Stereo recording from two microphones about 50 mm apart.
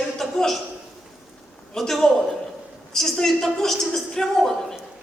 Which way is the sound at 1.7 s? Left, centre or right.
Centre.